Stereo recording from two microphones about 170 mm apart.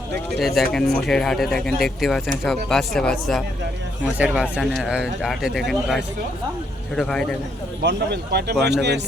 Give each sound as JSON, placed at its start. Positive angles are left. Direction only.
{"t": 0.3, "sound": "speech", "side_deg": 0}
{"t": 7.8, "sound": "a man's voice", "side_deg": -75}